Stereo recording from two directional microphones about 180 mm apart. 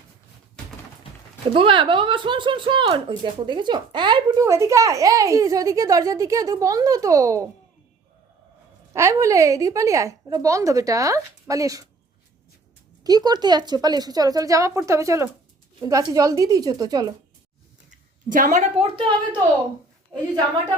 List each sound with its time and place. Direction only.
1.5 s speech: 30° right (ahead or behind)
8.9 s a woman's voice: 15° right (ahead or behind)
13.1 s speech: 20° right (ahead or behind)
18.3 s a woman's voice: 50° right (ahead or behind); by 19.4 s 30° right (ahead or behind)